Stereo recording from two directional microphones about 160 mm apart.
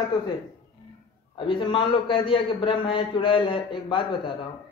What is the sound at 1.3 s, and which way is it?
A man's voice, 30° left (ahead or behind).